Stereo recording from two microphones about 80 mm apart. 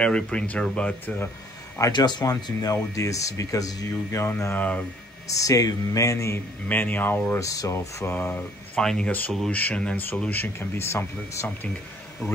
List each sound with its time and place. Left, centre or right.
0.0 s speech: centre
1.9 s speech: left
4.1 s speech: left
4.6 s speech: centre
5.3 s speech: left
6.7 s speech: left
7.3 s speech: left
8.1 s speech: left
8.7 s speech: centre; by 11.4 s left
11.4 s speech: left